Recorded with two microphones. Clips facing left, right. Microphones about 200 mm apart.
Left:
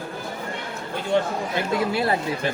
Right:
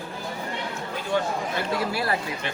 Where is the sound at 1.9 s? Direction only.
25° left (ahead or behind).